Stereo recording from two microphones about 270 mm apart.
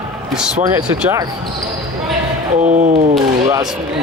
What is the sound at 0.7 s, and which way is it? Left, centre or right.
Speech, centre.